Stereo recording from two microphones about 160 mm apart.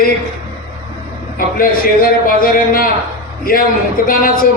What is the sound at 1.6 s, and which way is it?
A man's voice, 65° left (ahead or behind).